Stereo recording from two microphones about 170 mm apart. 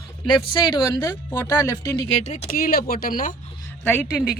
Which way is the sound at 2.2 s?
45° left (ahead or behind).